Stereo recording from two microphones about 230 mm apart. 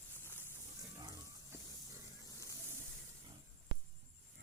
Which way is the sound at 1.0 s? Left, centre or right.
Centre.